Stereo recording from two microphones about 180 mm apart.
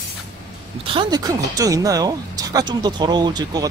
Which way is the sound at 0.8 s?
30° right (ahead or behind).